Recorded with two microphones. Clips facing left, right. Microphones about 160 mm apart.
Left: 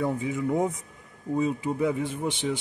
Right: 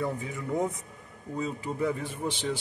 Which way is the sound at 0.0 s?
15° left (ahead or behind).